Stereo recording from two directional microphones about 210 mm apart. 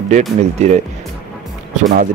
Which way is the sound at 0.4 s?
35° right (ahead or behind).